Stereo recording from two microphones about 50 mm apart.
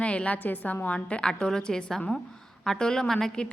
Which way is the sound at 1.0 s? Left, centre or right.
Left.